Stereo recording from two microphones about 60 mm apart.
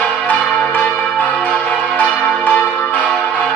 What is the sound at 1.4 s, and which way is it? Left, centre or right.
Church bell, left.